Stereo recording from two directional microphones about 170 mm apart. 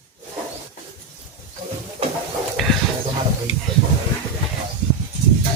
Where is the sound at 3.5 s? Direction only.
35° left (ahead or behind).